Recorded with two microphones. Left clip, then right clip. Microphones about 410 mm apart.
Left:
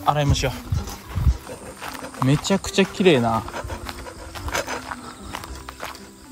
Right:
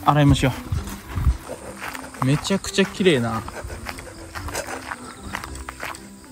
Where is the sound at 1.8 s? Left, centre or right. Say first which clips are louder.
Left 1 dB; centre.